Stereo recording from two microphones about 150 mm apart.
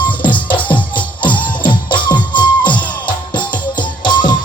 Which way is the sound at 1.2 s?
30° left (ahead or behind).